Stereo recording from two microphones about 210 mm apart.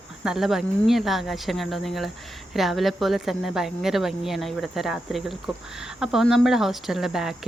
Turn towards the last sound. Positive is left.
turn(degrees=0)  # may be behind; listen again after turning